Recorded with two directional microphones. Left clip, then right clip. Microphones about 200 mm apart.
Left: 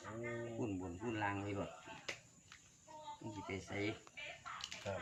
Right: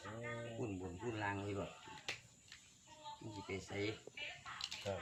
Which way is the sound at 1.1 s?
15° left (ahead or behind).